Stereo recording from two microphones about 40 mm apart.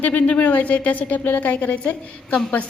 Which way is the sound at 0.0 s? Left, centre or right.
Left.